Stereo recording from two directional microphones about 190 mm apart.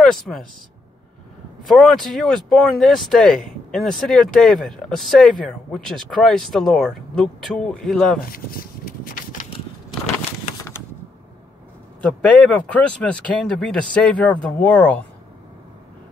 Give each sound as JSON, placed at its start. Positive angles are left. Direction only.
{"t": 0.0, "sound": "speech", "side_deg": 5}
{"t": 1.7, "sound": "speech", "side_deg": 0}
{"t": 8.3, "sound": "a sound", "side_deg": 50}
{"t": 12.3, "sound": "speech", "side_deg": 5}